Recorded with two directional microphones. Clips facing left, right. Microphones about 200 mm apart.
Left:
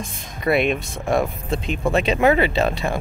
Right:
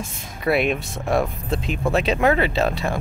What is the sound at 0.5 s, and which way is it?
Speech, 5° right (ahead or behind).